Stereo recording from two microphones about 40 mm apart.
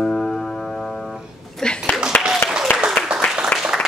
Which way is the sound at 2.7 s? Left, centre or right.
Left.